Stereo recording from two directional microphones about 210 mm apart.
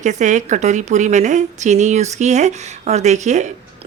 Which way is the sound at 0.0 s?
35° right (ahead or behind).